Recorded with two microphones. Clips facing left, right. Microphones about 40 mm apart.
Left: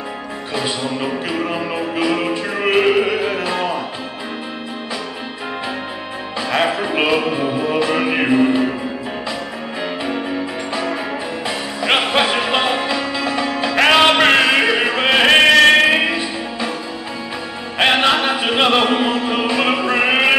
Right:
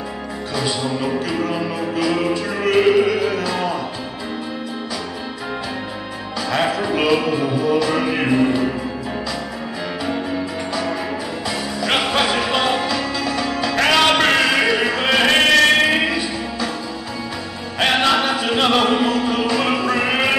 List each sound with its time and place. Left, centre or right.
0.6 s music: left
6.5 s music: left
10.7 s music: left
17.7 s music: left